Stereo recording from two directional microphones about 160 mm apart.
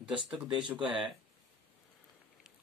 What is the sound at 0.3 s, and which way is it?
Speech, 5° right (ahead or behind).